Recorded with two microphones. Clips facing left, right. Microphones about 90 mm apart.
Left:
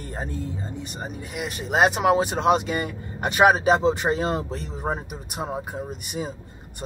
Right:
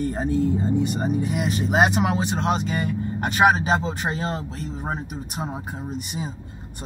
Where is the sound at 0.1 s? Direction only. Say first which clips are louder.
Right 9 dB; centre (ahead or behind).